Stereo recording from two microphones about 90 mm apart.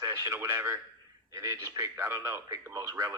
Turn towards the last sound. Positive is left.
turn(degrees=-40)  # may be behind; listen again after turning